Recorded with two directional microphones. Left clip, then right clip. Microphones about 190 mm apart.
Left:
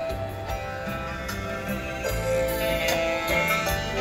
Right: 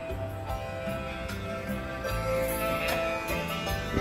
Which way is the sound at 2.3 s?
25° left (ahead or behind).